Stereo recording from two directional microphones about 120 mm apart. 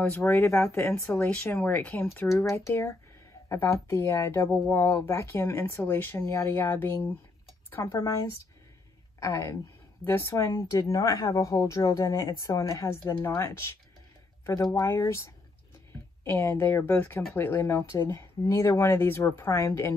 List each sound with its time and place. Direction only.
0.0 s speech: 20° left (ahead or behind)